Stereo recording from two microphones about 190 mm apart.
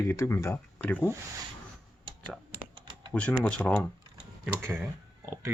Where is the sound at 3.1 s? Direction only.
5° left (ahead or behind).